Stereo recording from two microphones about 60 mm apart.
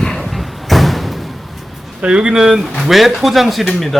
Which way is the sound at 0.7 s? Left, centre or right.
Centre.